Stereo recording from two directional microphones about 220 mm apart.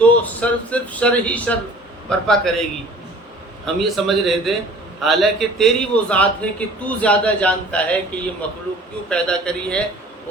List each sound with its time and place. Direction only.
0.0 s a man's voice: 5° left (ahead or behind)
3.8 s a man's voice: centre (ahead or behind)